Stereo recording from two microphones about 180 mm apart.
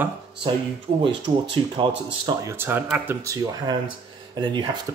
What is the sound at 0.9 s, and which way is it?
Speech, 30° right (ahead or behind).